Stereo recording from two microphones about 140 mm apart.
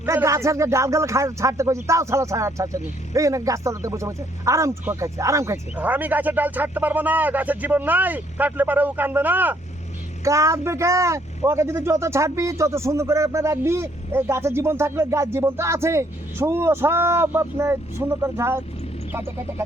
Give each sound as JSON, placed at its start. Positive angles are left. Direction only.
{"t": 0.0, "sound": "speech", "side_deg": -20}